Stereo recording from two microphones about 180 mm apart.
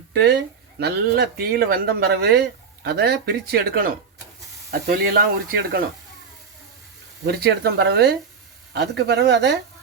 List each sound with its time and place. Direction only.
0.1 s speech: 65° right (ahead or behind)
7.3 s speech: 65° right (ahead or behind)